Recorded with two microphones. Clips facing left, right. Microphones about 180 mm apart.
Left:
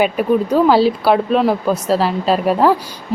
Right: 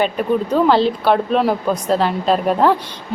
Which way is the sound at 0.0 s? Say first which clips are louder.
Left 3 dB; 10° left (ahead or behind).